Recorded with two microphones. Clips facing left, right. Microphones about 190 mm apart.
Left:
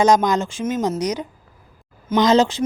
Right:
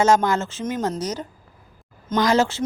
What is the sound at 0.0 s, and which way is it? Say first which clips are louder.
Speech: left 2 dB; 15° left (ahead or behind).